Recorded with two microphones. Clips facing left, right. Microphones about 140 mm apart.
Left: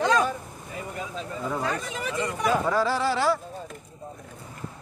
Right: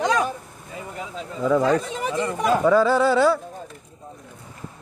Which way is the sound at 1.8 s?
30° right (ahead or behind).